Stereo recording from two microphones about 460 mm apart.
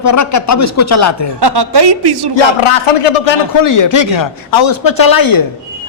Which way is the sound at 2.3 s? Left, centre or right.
Left.